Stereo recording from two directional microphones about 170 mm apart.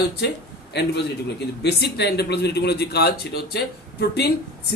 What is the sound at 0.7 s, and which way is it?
A man's voice, 80° left.